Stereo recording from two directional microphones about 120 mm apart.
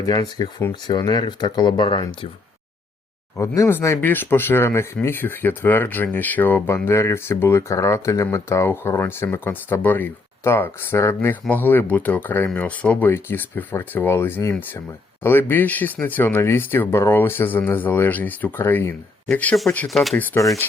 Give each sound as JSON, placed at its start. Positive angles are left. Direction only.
{"t": 0.0, "sound": "speech", "side_deg": 35}
{"t": 3.3, "sound": "speech", "side_deg": 25}
{"t": 19.9, "sound": "speech", "side_deg": 0}
{"t": 20.4, "sound": "speech", "side_deg": 25}